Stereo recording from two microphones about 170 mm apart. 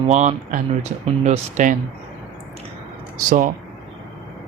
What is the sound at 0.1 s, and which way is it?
Speech, 45° right (ahead or behind).